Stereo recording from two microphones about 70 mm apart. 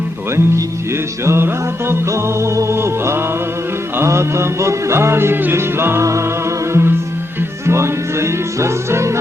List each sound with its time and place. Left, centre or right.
0.3 s music: right